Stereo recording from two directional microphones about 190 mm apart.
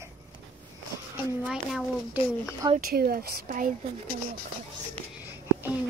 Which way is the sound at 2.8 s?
50° right (ahead or behind).